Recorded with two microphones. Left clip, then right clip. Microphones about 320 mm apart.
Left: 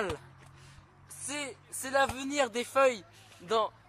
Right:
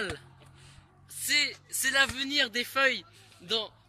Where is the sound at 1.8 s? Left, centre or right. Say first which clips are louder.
Right 3 dB; centre.